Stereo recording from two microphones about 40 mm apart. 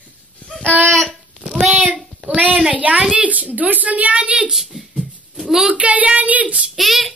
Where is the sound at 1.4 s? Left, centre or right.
Right.